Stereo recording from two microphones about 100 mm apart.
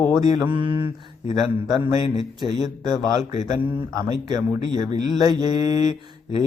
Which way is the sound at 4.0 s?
40° right (ahead or behind).